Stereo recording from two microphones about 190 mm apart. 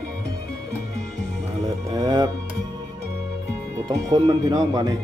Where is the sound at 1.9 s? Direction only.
20° right (ahead or behind).